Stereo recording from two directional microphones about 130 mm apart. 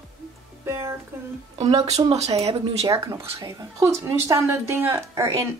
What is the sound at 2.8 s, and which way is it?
A woman's voice, 25° right (ahead or behind).